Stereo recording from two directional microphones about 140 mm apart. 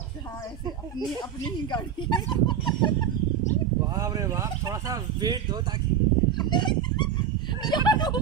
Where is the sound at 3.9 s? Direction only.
25° right (ahead or behind).